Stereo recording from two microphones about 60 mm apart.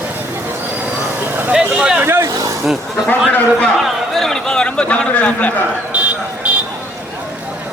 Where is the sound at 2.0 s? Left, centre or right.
Right.